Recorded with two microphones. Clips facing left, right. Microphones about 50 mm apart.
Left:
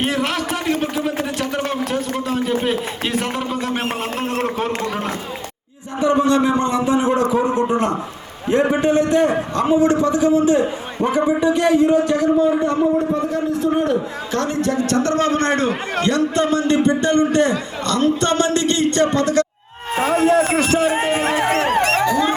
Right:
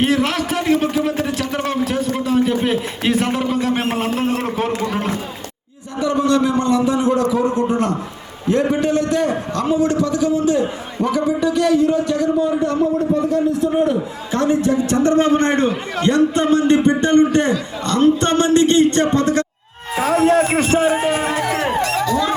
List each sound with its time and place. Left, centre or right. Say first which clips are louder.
0.0 s a man's voice: right 3 dB; centre
6.0 s a man's voice: left 1 dB; left
13.8 s a man's voice: even; centre
20.1 s a sound: right 1 dB; right
20.5 s a man's voice: right 1 dB; right
20.9 s music: right 1 dB; left
21.2 s dog: left 2 dB; left
22.0 s dog: left 1 dB; left